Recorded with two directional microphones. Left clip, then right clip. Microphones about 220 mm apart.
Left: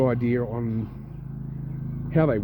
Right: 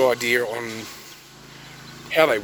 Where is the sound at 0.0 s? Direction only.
10° right (ahead or behind).